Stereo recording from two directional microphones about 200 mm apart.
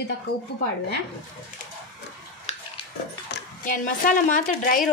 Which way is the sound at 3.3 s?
45° left (ahead or behind).